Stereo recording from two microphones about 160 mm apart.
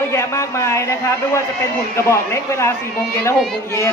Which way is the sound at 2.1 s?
15° left (ahead or behind).